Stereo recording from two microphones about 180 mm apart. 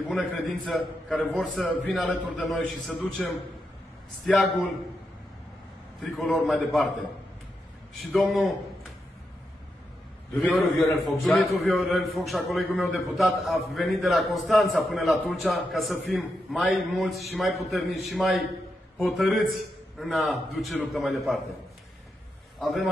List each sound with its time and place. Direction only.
0.1 s a man's voice: centre (ahead or behind)
6.0 s a man's voice: centre (ahead or behind)
8.1 s a man's voice: 5° left (ahead or behind)
10.3 s a man's voice: 5° left (ahead or behind)
22.6 s a man's voice: centre (ahead or behind)